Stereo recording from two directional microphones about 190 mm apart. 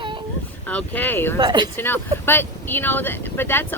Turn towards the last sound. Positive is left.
turn(degrees=10)  # may be behind; listen again after turning